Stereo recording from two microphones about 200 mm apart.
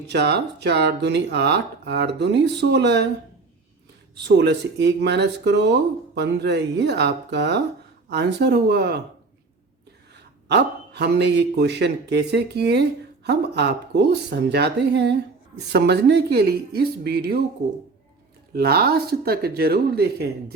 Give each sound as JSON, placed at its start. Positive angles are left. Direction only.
{"t": 0.1, "sound": "a man's voice", "side_deg": -55}
{"t": 4.1, "sound": "a man's voice", "side_deg": -55}
{"t": 10.2, "sound": "a man's voice", "side_deg": -55}
{"t": 18.5, "sound": "speech", "side_deg": -50}